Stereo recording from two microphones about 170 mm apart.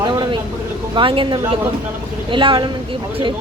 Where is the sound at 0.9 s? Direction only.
30° right (ahead or behind).